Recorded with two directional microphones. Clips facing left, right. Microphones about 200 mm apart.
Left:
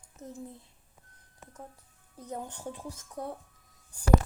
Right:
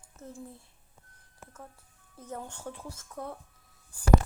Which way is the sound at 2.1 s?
15° left (ahead or behind).